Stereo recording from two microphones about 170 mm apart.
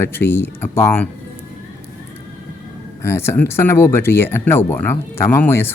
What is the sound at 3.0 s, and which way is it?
Speech, 15° left (ahead or behind).